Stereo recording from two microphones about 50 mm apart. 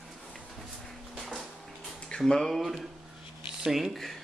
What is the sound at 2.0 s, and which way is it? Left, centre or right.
Speech, centre.